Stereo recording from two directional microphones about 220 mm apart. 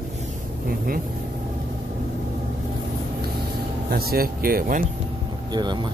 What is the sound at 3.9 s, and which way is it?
Speech, 45° right (ahead or behind).